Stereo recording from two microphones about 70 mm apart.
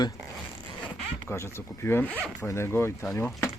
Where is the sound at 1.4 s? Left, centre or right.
Left.